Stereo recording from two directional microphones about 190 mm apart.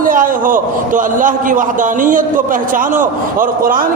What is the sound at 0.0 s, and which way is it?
A man's voice, 45° right (ahead or behind).